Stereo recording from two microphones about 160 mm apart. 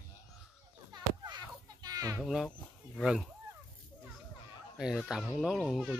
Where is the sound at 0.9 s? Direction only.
25° right (ahead or behind).